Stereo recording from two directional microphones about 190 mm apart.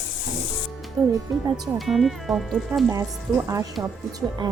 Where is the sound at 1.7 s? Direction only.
Centre (ahead or behind).